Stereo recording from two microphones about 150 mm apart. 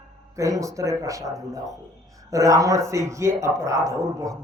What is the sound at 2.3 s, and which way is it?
Speech, 20° right (ahead or behind).